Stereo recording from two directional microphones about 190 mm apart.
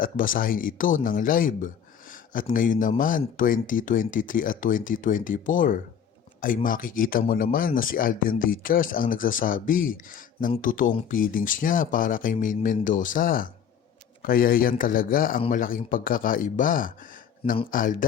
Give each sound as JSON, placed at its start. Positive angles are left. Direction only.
{"t": 0.0, "sound": "speech", "side_deg": 45}